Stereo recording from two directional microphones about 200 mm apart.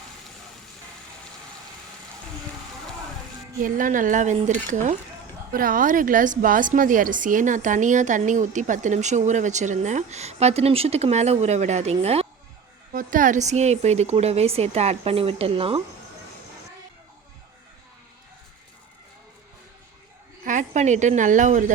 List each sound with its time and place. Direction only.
3.6 s a woman's voice: 40° right (ahead or behind)
20.4 s a woman's voice: 40° right (ahead or behind)